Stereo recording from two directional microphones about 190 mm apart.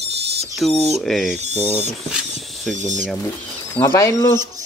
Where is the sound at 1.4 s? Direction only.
35° right (ahead or behind).